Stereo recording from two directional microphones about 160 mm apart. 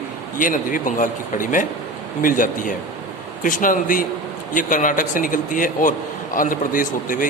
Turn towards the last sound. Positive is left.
turn(degrees=55)  # may be behind; listen again after turning